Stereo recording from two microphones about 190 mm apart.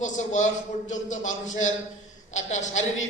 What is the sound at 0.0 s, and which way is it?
A man's voice, 40° left (ahead or behind).